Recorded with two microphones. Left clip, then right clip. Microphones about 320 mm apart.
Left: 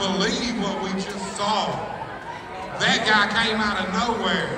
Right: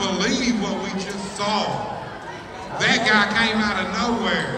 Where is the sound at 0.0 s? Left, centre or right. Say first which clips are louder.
Right 1 dB; centre.